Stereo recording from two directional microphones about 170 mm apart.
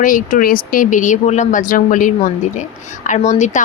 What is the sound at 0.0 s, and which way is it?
Speech, 50° left (ahead or behind).